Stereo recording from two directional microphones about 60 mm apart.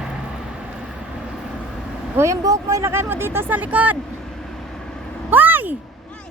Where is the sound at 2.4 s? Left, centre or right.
Right.